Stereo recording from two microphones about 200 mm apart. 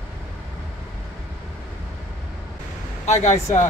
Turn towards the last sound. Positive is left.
turn(degrees=35)  # may be behind; listen again after turning